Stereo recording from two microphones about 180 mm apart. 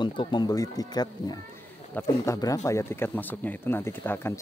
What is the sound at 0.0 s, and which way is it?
Speech, 25° left (ahead or behind).